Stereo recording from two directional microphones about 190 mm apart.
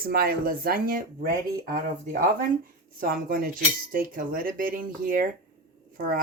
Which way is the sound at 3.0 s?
50° right (ahead or behind).